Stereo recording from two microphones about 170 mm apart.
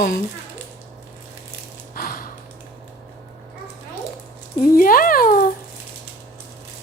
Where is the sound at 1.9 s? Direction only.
55° left (ahead or behind).